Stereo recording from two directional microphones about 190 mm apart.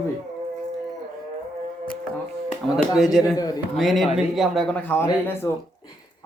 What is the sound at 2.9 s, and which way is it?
A man's voice, centre (ahead or behind).